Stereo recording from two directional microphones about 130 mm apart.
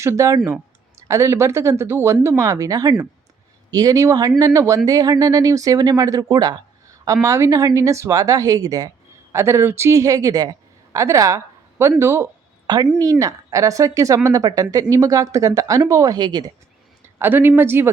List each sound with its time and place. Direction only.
0.0 s speech: 20° right (ahead or behind)
17.2 s speech: 15° right (ahead or behind)